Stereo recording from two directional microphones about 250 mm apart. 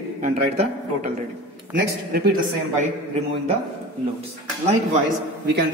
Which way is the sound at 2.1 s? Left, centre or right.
Right.